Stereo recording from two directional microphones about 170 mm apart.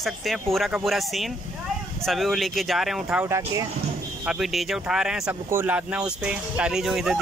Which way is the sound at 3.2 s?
15° right (ahead or behind).